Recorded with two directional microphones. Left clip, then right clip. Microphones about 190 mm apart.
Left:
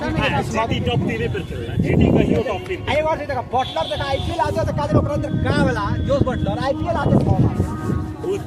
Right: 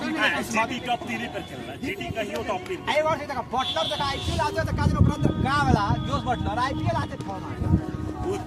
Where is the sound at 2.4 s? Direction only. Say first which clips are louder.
Left 5 dB; 55° right (ahead or behind).